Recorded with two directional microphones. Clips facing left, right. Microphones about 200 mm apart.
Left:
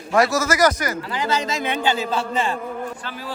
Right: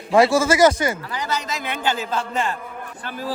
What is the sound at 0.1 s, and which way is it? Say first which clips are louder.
Speech: right 3 dB; 30° right (ahead or behind).